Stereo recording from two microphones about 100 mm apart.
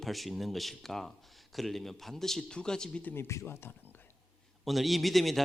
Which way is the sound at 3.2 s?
25° left (ahead or behind).